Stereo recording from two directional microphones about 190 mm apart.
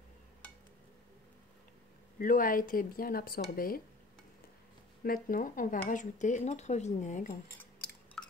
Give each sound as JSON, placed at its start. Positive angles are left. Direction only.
{"t": 2.1, "sound": "speech", "side_deg": 45}
{"t": 5.0, "sound": "speech", "side_deg": 50}
{"t": 8.2, "sound": "a sound", "side_deg": 5}